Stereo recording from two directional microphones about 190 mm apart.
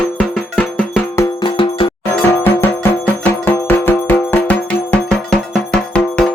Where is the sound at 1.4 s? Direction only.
25° left (ahead or behind).